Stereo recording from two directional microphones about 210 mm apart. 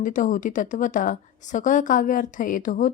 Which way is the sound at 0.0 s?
40° left (ahead or behind).